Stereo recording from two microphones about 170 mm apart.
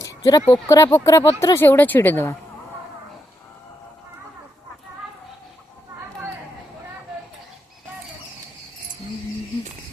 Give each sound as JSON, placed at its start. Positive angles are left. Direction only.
{"t": 0.0, "sound": "speech", "side_deg": 20}